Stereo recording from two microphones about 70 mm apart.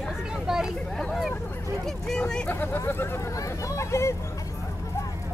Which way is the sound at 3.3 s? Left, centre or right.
Left.